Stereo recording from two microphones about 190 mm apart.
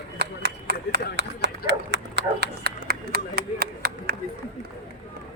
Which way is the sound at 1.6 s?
65° right (ahead or behind).